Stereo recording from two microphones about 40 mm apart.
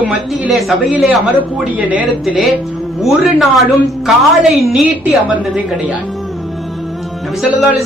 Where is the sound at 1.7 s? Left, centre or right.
Right.